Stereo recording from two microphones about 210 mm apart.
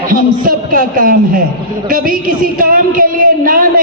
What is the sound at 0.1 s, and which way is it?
A man's voice, 40° right (ahead or behind).